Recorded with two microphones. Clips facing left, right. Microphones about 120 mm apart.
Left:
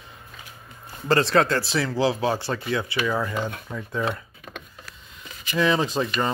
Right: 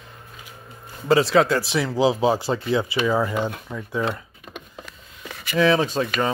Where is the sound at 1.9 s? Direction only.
20° right (ahead or behind).